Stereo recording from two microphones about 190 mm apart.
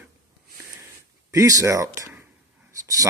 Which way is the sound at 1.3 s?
15° right (ahead or behind).